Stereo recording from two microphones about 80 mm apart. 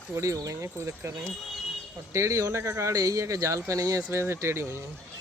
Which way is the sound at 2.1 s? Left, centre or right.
Right.